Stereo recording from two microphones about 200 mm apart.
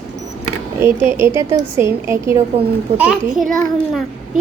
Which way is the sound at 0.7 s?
10° right (ahead or behind).